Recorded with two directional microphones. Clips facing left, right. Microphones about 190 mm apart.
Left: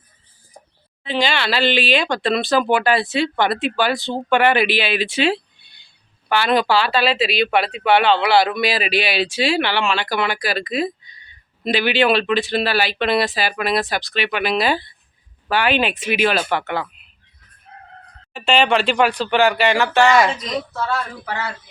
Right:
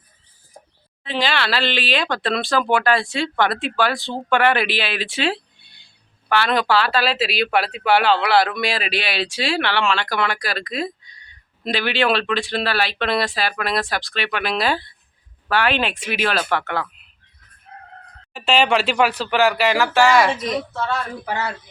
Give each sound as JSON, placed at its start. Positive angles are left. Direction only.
{"t": 1.0, "sound": "speech", "side_deg": 0}
{"t": 18.3, "sound": "speech", "side_deg": -5}
{"t": 20.9, "sound": "speech", "side_deg": -20}